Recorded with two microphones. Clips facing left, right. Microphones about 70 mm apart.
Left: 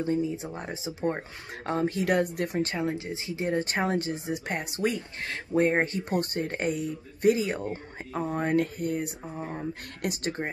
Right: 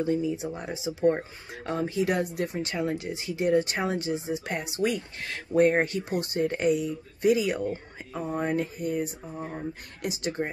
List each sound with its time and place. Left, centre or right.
0.0 s speech: left
2.7 s speech: left
7.3 s speech: left
8.3 s speech: left